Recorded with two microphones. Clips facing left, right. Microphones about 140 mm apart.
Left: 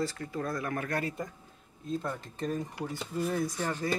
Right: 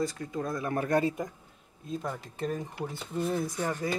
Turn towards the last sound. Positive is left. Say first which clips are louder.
# right 1 dB
turn(degrees=-15)  # may be behind; listen again after turning